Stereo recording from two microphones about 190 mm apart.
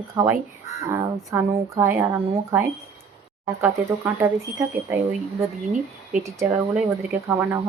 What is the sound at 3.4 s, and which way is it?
A woman's voice, 10° right (ahead or behind).